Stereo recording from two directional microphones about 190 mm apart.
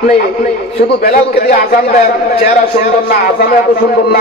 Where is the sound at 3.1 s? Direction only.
50° left (ahead or behind).